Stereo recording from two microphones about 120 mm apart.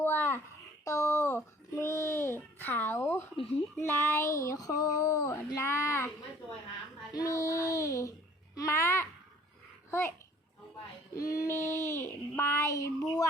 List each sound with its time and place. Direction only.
0.0 s a sound: 20° left (ahead or behind)
7.1 s child singing: 30° left (ahead or behind)
8.5 s babbling: 25° left (ahead or behind)
11.1 s child singing: 30° left (ahead or behind)